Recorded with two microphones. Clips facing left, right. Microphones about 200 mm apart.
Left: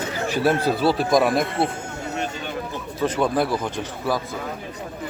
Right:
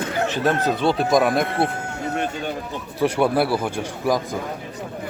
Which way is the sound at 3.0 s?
10° right (ahead or behind).